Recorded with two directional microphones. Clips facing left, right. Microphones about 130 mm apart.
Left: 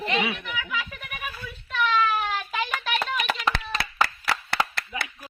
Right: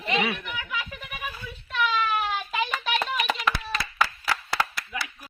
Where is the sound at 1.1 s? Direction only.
15° right (ahead or behind).